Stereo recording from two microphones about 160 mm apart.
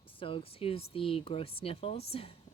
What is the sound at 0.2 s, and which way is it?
Speech, 35° left (ahead or behind).